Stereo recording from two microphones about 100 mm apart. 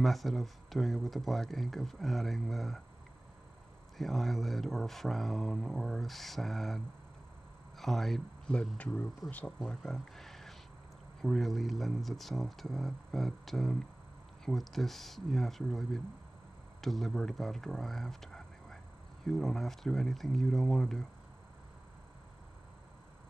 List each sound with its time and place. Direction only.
0.0 s speech: centre (ahead or behind)
4.0 s speech: centre (ahead or behind)